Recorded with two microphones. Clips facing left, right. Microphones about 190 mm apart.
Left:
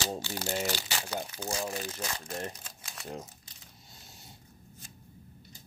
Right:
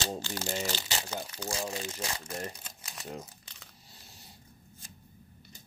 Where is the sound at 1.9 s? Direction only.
10° right (ahead or behind).